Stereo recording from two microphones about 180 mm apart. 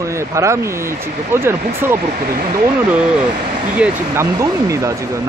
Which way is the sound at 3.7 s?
10° right (ahead or behind).